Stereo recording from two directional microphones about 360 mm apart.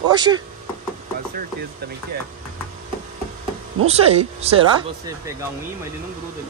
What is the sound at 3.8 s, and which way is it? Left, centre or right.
Speech, centre.